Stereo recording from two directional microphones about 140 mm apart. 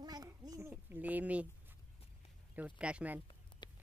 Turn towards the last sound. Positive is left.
turn(degrees=35)  # may be behind; listen again after turning